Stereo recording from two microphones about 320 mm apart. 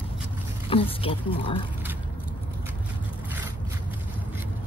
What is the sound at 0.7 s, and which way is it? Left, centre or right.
Speech, centre.